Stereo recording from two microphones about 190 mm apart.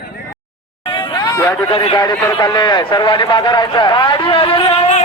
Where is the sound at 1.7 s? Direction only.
25° left (ahead or behind).